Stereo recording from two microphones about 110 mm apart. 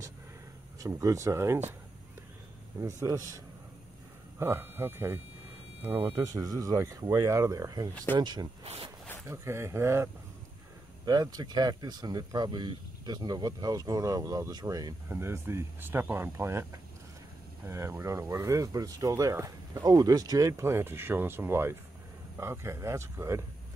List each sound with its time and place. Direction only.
0.7 s speech: 30° right (ahead or behind)
2.8 s speech: 30° right (ahead or behind)
4.4 s speech: 20° right (ahead or behind)
6.2 s speech: 35° right (ahead or behind)
7.9 s speech: 10° left (ahead or behind)
8.2 s speech: 40° right (ahead or behind)
8.6 s speech: 65° right (ahead or behind)
9.2 s speech: 25° right (ahead or behind)
11.1 s speech: 40° right (ahead or behind)
15.0 s speech: 25° right (ahead or behind)